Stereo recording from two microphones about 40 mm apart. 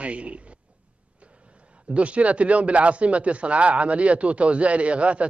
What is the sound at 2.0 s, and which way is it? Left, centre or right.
A man's voice, right.